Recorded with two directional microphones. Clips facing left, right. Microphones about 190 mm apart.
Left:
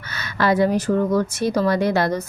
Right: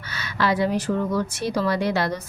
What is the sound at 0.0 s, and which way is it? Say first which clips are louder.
A woman's voice: left 3 dB; 45° left (ahead or behind).